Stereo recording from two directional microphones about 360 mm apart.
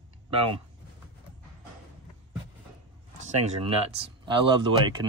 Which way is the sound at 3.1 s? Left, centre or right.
Centre.